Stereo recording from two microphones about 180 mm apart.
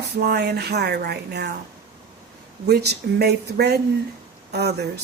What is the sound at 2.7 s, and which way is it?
A woman's voice, 65° right (ahead or behind).